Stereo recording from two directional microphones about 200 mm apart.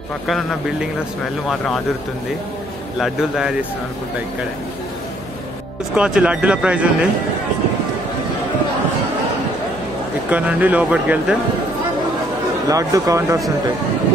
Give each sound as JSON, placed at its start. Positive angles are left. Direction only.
{"t": 0.3, "sound": "speech", "side_deg": 0}
{"t": 3.0, "sound": "speech", "side_deg": 0}
{"t": 5.9, "sound": "speech", "side_deg": -5}
{"t": 10.3, "sound": "speech", "side_deg": -5}
{"t": 12.6, "sound": "speech", "side_deg": -15}